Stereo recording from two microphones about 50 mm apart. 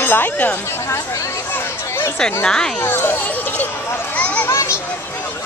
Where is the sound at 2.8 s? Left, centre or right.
Left.